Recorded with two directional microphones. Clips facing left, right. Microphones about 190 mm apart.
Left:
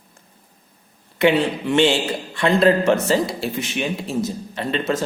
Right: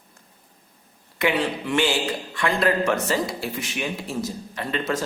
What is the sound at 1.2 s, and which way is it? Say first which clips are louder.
A man's voice: left 6 dB; 25° left (ahead or behind).